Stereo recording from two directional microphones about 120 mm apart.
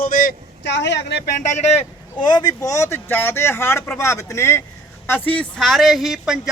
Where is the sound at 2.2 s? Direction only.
35° left (ahead or behind).